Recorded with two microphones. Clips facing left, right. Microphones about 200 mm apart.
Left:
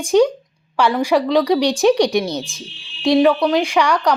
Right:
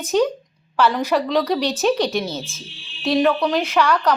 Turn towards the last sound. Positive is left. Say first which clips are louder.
# left 2 dB
turn(degrees=15)  # may be behind; listen again after turning